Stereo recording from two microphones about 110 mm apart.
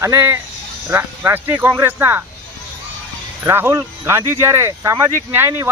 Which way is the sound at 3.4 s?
20° right (ahead or behind).